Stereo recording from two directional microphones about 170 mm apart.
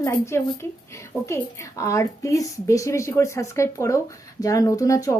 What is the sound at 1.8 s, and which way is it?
A woman's voice, 20° left (ahead or behind).